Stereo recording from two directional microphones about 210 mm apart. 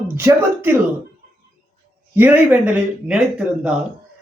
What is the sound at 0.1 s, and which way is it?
Speech, 10° right (ahead or behind).